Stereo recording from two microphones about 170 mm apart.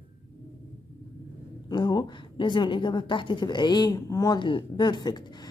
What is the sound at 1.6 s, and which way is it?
A woman's voice, 25° left (ahead or behind).